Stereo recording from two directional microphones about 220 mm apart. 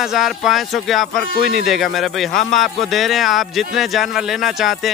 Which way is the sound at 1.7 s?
Centre (ahead or behind).